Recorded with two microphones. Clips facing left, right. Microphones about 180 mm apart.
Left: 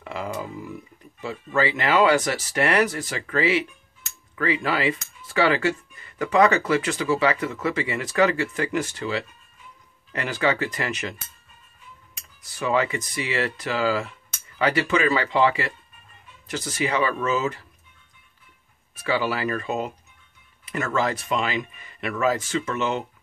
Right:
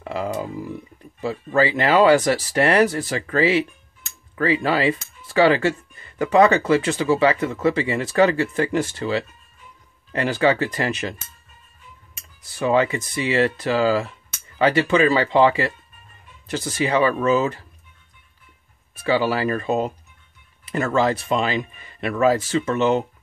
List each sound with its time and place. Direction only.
0.0 s speech: 35° right (ahead or behind)
12.5 s speech: 30° right (ahead or behind)
19.0 s speech: 30° right (ahead or behind)